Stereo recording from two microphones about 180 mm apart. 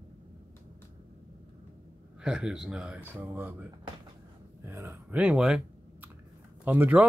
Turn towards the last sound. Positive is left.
turn(degrees=-10)  # may be behind; listen again after turning